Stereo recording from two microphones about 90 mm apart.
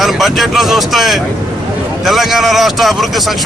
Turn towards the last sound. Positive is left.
turn(degrees=0)  # may be behind; listen again after turning